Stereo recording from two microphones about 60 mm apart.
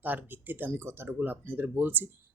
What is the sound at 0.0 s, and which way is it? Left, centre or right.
Speech, right.